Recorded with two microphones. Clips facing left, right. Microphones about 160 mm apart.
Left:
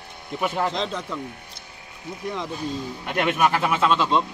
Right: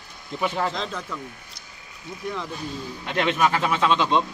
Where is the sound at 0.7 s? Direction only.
20° left (ahead or behind).